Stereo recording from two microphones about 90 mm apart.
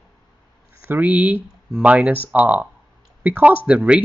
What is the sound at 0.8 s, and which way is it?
Speech, 15° right (ahead or behind).